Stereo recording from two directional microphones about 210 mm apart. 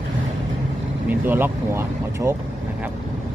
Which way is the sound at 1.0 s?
10° right (ahead or behind).